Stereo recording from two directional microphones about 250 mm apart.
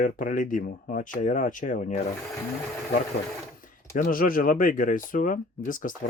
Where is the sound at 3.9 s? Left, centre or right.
Left.